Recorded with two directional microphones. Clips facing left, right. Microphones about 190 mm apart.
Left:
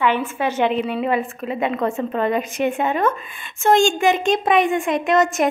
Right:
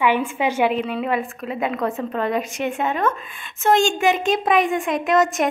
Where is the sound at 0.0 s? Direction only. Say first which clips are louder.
Even; 15° right (ahead or behind).